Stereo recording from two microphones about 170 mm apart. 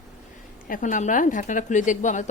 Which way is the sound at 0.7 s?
50° left (ahead or behind).